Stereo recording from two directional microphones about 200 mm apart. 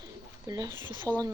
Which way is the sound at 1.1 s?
10° left (ahead or behind).